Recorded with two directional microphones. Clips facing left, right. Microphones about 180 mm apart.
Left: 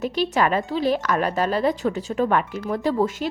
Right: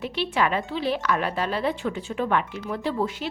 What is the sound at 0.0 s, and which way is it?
A woman's voice, 40° left (ahead or behind).